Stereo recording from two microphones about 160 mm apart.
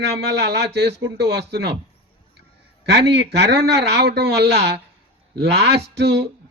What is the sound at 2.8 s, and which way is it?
Speech, 90° right.